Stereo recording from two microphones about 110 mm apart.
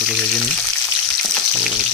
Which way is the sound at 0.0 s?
Centre (ahead or behind).